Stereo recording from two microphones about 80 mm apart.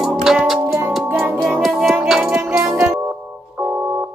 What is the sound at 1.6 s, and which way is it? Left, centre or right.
Music, centre.